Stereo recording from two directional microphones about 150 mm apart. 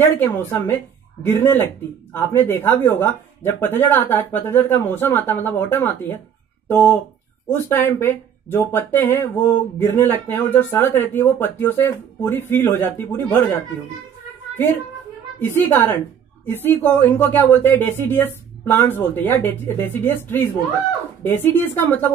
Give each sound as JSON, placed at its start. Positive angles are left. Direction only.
{"t": 0.0, "sound": "speech", "side_deg": 15}
{"t": 15.4, "sound": "speech", "side_deg": 15}